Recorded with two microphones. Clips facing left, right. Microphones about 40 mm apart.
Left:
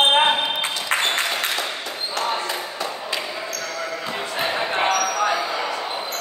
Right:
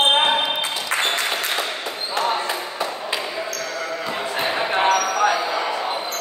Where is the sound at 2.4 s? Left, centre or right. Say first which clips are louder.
Right 2 dB; centre.